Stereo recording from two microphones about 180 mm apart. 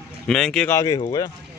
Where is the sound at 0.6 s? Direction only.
20° left (ahead or behind).